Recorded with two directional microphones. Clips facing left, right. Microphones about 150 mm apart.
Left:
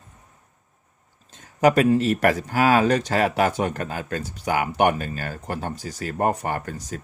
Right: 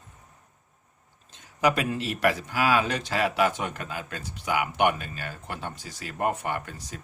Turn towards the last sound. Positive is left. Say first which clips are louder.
# left 4 dB
turn(degrees=40)  # may be behind; listen again after turning